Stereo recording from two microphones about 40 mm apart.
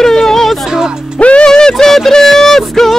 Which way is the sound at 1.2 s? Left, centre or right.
Left.